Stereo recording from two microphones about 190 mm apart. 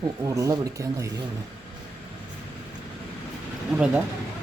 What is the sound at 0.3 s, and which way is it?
Speech, 15° right (ahead or behind).